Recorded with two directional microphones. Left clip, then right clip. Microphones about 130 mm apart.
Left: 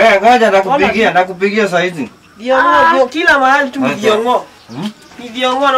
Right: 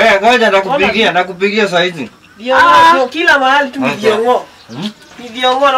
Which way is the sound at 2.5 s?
20° right (ahead or behind).